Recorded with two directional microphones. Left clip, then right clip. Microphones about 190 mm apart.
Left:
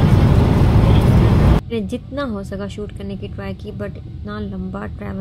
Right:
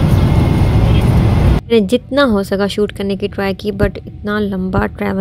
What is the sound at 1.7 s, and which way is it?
Speech, 50° right (ahead or behind).